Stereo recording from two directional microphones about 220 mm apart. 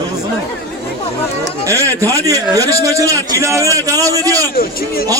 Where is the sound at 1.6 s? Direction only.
15° right (ahead or behind).